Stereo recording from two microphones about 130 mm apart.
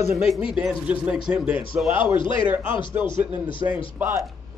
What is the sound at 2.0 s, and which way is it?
Speech, 40° left (ahead or behind).